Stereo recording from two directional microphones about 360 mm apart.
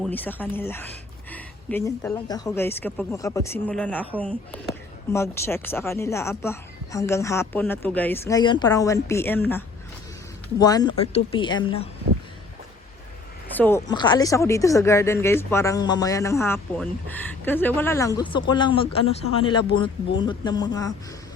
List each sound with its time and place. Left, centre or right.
0.0 s speech: centre
13.5 s speech: centre